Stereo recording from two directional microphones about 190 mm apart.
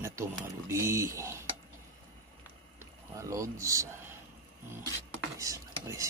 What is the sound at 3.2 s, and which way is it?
Speech, 15° right (ahead or behind).